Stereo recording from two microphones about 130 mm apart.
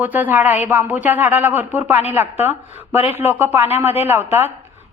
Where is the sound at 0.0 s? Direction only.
15° right (ahead or behind).